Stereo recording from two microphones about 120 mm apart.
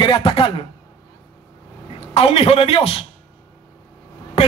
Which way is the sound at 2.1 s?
55° left (ahead or behind).